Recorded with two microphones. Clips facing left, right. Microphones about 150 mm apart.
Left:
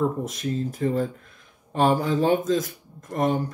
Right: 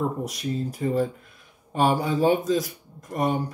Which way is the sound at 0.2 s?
15° right (ahead or behind).